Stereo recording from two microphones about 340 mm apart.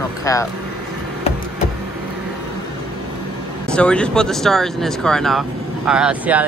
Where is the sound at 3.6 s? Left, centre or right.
Centre.